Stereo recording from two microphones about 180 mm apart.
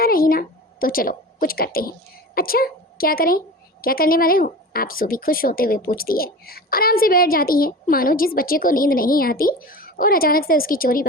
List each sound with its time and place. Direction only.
0.0 s a woman's voice: 55° left (ahead or behind)